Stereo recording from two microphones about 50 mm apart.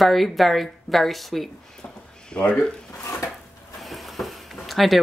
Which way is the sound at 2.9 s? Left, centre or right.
Left.